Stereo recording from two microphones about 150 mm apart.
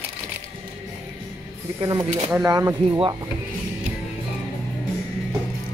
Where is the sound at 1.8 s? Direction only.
25° right (ahead or behind).